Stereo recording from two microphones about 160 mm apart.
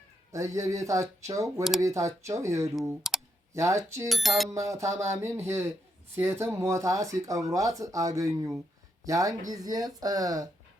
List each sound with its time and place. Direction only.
0.3 s speech: 20° right (ahead or behind)
3.1 s clicking: centre (ahead or behind)
3.5 s speech: 20° right (ahead or behind)
4.1 s speech: centre (ahead or behind)
4.4 s speech: 20° right (ahead or behind)